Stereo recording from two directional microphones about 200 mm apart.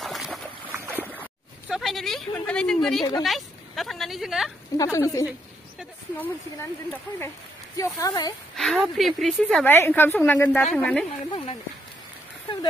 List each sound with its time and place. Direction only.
0.0 s a sound: centre (ahead or behind)
0.8 s boat: 10° right (ahead or behind)
1.7 s a woman's voice: centre (ahead or behind)
3.0 s speech: 20° left (ahead or behind)
3.3 s speech: centre (ahead or behind)
4.7 s a woman's voice: 15° left (ahead or behind)
8.5 s a woman's voice: centre (ahead or behind)
9.7 s a woman's voice: 10° left (ahead or behind)
11.2 s speech: 25° left (ahead or behind)